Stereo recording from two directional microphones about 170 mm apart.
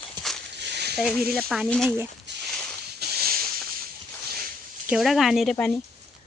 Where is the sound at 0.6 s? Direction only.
80° right.